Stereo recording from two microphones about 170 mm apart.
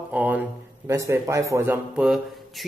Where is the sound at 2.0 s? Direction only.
Centre (ahead or behind).